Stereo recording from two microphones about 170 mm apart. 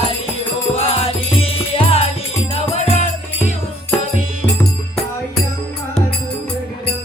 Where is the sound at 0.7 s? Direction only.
35° left (ahead or behind).